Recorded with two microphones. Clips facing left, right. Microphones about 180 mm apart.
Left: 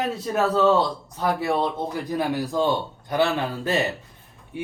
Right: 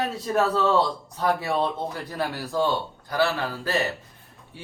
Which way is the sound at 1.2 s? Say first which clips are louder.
Left 1 dB; 15° left (ahead or behind).